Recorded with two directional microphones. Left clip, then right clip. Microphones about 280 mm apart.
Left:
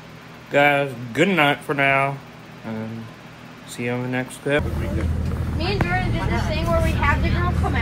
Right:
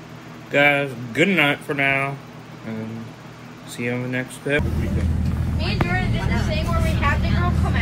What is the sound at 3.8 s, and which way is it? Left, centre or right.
Speech, centre.